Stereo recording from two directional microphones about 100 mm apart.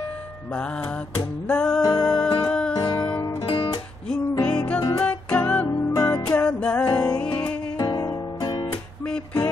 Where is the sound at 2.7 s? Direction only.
45° left (ahead or behind).